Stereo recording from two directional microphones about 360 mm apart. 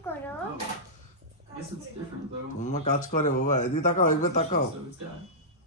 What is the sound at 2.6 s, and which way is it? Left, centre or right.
A man's voice, centre.